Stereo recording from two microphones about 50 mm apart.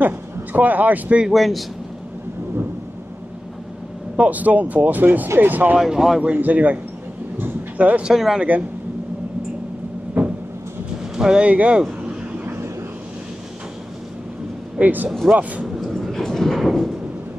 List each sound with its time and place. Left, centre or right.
0.0 s speech: right
1.3 s speech: centre
4.2 s speech: right
5.8 s speech: centre
6.3 s speech: right
8.1 s speech: centre
10.2 s cupboard open or close: right
11.1 s speech: centre
11.4 s speech: right
14.8 s speech: right
15.8 s a sound: centre